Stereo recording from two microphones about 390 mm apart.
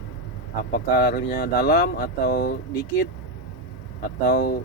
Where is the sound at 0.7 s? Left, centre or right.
Left.